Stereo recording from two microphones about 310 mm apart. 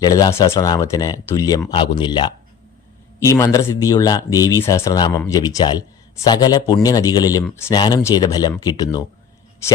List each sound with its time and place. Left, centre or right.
0.0 s speech: centre